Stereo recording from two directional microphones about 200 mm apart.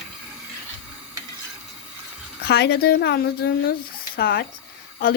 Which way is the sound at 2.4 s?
55° left (ahead or behind).